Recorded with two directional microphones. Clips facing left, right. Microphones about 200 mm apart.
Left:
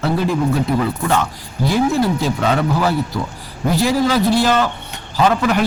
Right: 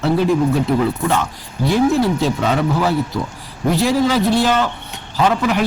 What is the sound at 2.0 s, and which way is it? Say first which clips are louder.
Speech: even; centre (ahead or behind).